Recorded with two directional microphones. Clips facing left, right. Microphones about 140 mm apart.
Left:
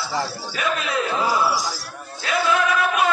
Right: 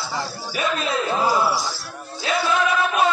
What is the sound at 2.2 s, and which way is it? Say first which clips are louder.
Music: right 1 dB; 25° right (ahead or behind).